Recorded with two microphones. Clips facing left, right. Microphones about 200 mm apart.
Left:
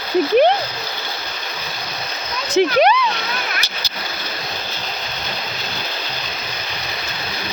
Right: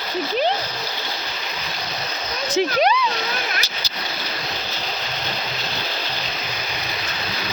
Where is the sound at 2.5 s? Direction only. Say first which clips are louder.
Left 5 dB; 65° left (ahead or behind).